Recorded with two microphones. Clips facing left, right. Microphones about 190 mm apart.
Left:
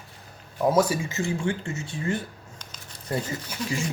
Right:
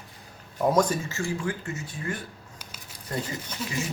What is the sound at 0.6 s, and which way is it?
Speech, 5° left (ahead or behind).